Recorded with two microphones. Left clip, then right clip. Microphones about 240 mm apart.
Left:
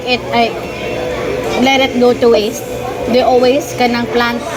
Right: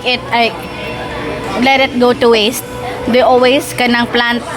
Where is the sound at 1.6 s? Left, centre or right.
Right.